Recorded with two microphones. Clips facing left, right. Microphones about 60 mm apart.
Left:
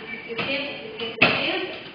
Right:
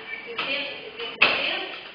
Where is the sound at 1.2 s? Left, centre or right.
Left.